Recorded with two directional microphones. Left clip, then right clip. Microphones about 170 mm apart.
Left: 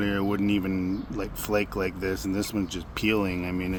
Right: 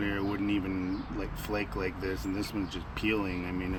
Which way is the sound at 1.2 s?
55° left (ahead or behind).